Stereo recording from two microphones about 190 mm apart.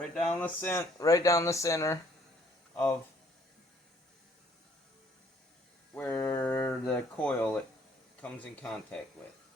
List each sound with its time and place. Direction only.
0.3 s speech: 10° left (ahead or behind)
5.9 s speech: 10° left (ahead or behind)